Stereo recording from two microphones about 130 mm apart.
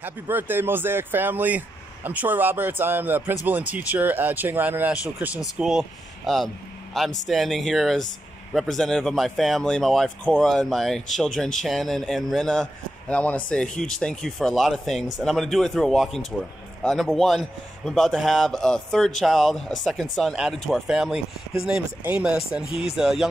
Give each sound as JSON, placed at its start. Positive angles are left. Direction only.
{"t": 0.0, "sound": "a man's voice", "side_deg": -15}
{"t": 22.7, "sound": "speech", "side_deg": 50}
{"t": 22.9, "sound": "a man's voice", "side_deg": -5}